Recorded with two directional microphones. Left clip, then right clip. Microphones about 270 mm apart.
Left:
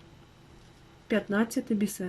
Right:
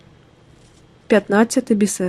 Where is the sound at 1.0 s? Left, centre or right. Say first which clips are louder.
Right 13 dB; right.